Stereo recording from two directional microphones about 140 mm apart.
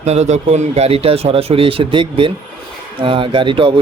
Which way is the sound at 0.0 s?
55° right (ahead or behind).